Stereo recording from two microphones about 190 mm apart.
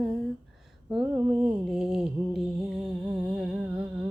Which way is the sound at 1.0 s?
20° right (ahead or behind).